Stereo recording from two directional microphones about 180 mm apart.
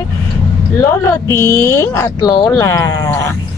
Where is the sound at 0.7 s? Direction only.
15° left (ahead or behind).